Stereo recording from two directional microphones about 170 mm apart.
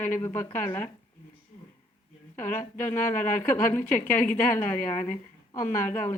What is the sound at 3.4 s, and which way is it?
A woman's voice, 10° left (ahead or behind).